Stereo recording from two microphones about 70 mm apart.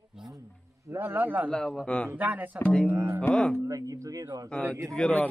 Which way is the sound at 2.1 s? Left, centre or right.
Right.